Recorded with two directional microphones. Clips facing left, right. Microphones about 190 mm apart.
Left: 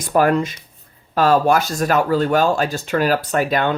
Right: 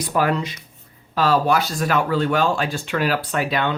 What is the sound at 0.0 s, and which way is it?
Speech, 50° left (ahead or behind).